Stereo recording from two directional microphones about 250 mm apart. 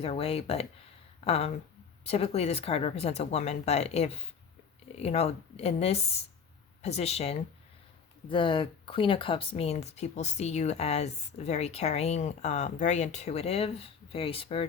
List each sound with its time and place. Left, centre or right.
0.0 s speech: left